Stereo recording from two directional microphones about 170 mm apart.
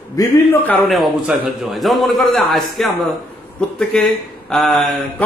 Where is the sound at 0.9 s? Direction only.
Centre (ahead or behind).